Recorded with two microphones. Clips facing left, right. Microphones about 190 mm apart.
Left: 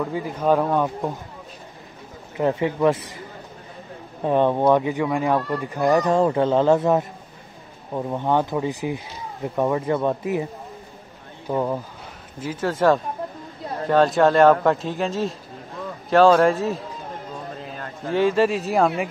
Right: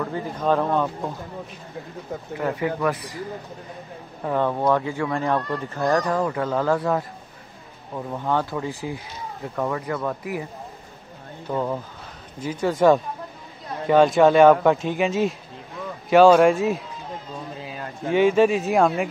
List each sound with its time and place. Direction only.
0.0 s speech: 10° left (ahead or behind)
2.3 s speech: 25° left (ahead or behind)
4.2 s speech: 20° left (ahead or behind)
6.1 s speech: 30° left (ahead or behind)
11.4 s speech: 10° left (ahead or behind)
17.7 s a man's voice: centre (ahead or behind)